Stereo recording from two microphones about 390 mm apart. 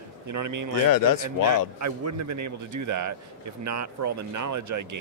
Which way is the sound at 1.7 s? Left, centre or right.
Right.